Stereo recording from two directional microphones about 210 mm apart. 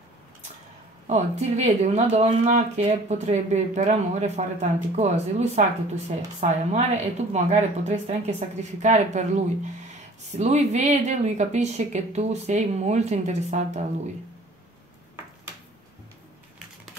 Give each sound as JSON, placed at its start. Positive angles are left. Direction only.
{"t": 1.0, "sound": "speech", "side_deg": -30}